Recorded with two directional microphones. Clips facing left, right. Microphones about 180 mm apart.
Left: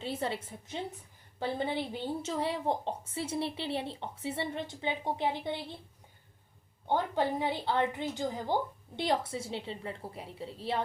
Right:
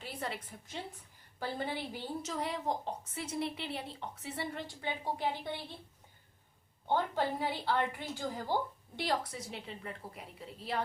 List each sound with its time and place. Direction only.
0.0 s a woman's voice: 25° left (ahead or behind)
6.8 s a woman's voice: 15° left (ahead or behind)